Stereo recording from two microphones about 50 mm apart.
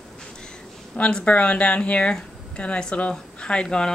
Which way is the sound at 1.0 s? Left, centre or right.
Left.